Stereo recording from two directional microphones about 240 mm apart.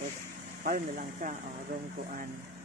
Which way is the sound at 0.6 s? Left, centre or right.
Right.